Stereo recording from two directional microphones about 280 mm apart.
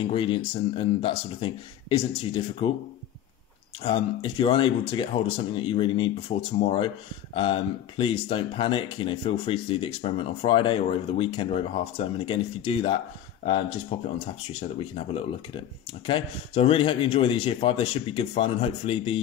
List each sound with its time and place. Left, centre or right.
0.0 s speech: centre
3.8 s speech: centre